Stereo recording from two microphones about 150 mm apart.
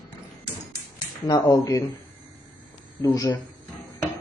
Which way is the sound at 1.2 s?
25° left (ahead or behind).